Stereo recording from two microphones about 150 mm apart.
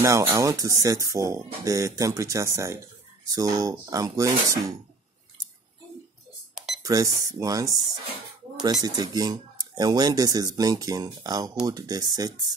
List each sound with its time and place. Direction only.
0.0 s speech: 20° right (ahead or behind)
6.5 s cash register: centre (ahead or behind)
6.8 s speech: 25° right (ahead or behind)
8.8 s speech: 25° right (ahead or behind)